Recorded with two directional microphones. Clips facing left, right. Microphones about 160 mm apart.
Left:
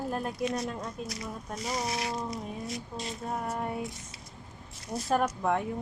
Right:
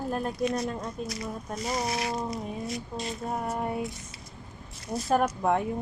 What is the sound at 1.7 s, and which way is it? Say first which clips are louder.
Speech: right 3 dB; 55° right (ahead or behind).